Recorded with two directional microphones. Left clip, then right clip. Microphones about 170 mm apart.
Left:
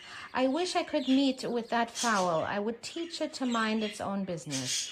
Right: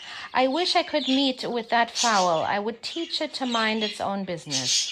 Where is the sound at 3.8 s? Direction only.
20° right (ahead or behind).